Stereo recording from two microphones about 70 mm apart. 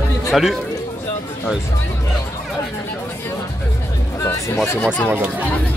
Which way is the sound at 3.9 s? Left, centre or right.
Left.